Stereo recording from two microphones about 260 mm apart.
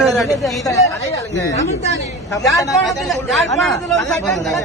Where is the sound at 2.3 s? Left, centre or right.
Centre.